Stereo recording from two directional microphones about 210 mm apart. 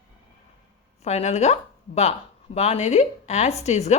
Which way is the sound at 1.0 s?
30° left (ahead or behind).